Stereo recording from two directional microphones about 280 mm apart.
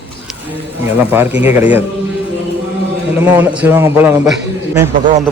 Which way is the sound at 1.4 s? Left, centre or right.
Centre.